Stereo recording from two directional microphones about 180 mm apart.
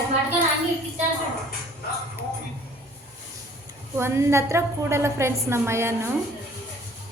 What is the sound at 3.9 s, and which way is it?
A woman's voice, 15° right (ahead or behind).